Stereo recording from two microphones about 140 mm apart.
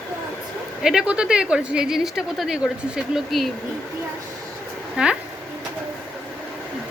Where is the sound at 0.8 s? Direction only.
5° right (ahead or behind).